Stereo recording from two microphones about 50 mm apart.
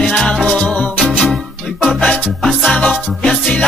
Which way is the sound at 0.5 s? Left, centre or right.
Left.